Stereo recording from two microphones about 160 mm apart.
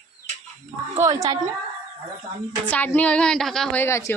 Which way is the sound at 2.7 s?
10° left (ahead or behind).